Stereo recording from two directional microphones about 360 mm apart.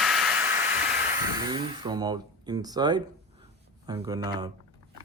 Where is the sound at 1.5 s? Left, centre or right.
Centre.